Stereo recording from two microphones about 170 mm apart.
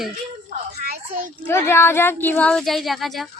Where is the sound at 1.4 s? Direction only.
15° left (ahead or behind).